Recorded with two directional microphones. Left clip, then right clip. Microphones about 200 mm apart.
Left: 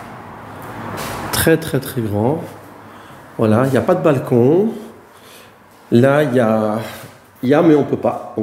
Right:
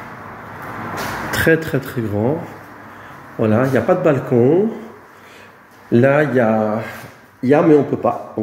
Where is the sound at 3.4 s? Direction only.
15° left (ahead or behind).